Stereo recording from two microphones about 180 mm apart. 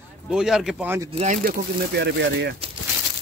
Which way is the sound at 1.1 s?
40° right (ahead or behind).